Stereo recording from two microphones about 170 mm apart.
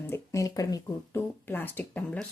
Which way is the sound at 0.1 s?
15° left (ahead or behind).